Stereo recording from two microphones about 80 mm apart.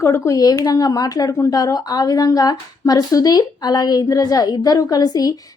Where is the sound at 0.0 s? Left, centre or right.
Left.